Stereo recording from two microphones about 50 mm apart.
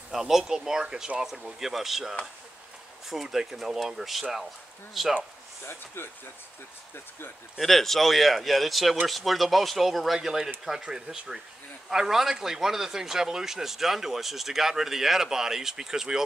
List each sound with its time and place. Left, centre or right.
0.1 s speech: centre
6.0 s speech: left
7.5 s speech: centre